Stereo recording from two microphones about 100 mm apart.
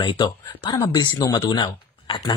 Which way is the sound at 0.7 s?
35° left (ahead or behind).